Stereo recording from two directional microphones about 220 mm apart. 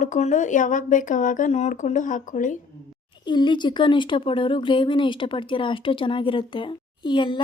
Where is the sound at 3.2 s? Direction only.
20° left (ahead or behind).